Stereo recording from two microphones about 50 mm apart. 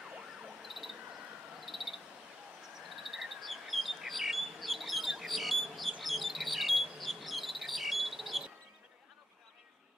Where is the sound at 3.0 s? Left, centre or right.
Centre.